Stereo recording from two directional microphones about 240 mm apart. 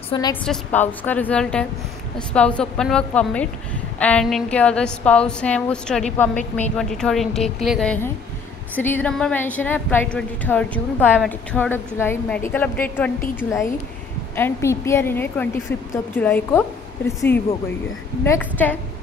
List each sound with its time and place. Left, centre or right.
0.1 s a woman's voice: centre
18.2 s a woman's voice: centre